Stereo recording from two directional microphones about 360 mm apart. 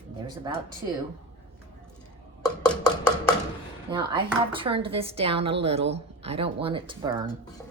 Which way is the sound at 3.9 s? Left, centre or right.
Centre.